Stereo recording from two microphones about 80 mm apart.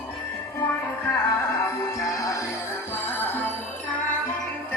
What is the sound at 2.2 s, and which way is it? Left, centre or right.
Music, left.